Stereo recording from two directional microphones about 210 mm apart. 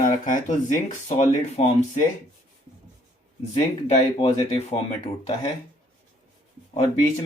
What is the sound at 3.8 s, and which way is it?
Speech, 30° left (ahead or behind).